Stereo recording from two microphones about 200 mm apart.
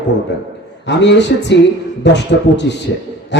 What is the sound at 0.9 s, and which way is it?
Music, 60° left (ahead or behind).